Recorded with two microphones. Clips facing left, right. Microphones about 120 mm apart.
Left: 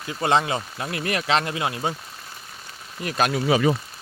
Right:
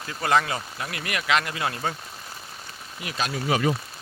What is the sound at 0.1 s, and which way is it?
Speech, 25° left (ahead or behind).